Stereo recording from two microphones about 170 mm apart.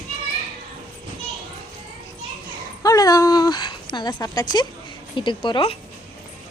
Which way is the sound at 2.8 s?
20° left (ahead or behind).